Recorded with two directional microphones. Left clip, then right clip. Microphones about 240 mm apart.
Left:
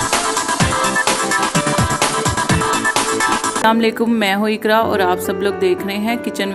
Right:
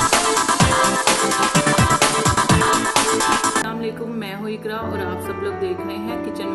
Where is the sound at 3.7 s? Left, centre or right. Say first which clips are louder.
Left 11 dB; left.